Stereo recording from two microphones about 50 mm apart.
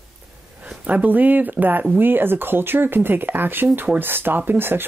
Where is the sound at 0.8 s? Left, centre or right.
Right.